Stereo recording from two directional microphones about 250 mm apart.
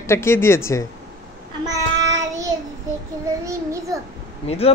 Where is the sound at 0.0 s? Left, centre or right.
Centre.